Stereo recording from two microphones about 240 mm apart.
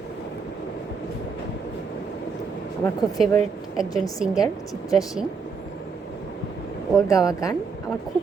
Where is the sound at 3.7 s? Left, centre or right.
Centre.